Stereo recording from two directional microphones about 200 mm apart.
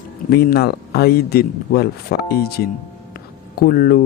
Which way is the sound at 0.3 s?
50° left (ahead or behind).